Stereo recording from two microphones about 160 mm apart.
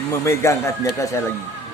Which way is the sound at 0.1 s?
15° left (ahead or behind).